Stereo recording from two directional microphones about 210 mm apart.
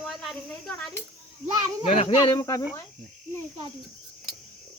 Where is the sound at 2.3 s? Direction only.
15° left (ahead or behind).